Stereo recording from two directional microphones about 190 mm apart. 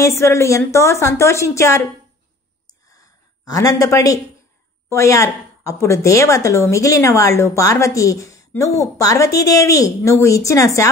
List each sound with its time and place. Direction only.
0.0 s speech: 15° left (ahead or behind)
3.4 s speech: 15° left (ahead or behind)